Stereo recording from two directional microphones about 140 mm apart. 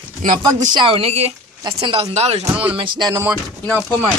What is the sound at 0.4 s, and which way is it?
Speech, 30° right (ahead or behind).